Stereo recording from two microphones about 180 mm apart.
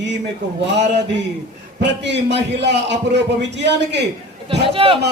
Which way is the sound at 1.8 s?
75° right (ahead or behind).